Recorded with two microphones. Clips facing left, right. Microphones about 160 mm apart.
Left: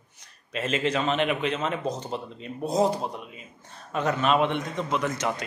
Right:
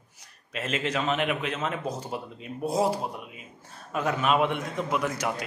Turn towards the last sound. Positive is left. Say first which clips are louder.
# left 1 dB
turn(degrees=-10)  # may be behind; listen again after turning